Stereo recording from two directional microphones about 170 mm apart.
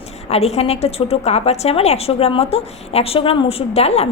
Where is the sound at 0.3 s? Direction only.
40° left (ahead or behind).